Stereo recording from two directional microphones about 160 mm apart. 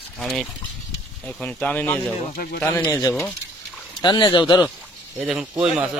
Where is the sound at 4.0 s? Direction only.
25° left (ahead or behind).